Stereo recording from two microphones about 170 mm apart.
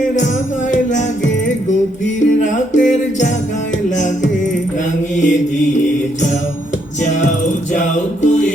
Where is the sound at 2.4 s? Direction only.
45° left (ahead or behind).